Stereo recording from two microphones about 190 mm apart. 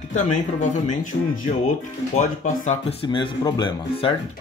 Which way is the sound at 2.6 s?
30° left (ahead or behind).